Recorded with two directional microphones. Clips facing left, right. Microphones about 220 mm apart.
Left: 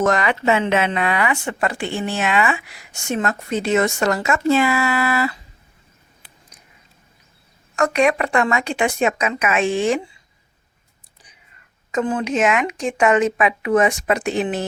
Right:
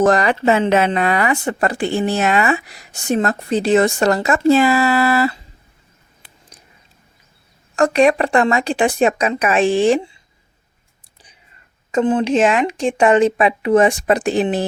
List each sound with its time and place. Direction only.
0.0 s speech: 35° right (ahead or behind)
7.8 s speech: 30° right (ahead or behind)
11.9 s speech: 25° right (ahead or behind)